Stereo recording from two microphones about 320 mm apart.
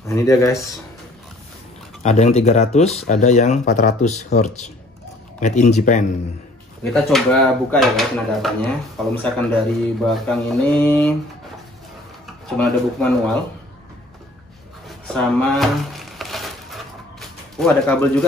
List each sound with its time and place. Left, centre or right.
0.0 s speech: centre
2.0 s speech: centre
6.8 s speech: centre
12.4 s speech: centre
15.1 s a sound: centre
17.6 s speech: centre